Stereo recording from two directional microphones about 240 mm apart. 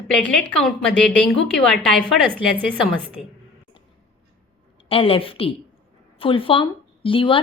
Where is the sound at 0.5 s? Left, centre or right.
Centre.